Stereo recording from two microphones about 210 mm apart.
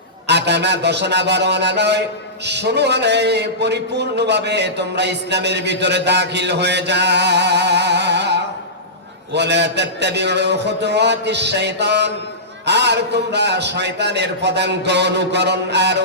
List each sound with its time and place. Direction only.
0.3 s a man's voice: 55° right (ahead or behind)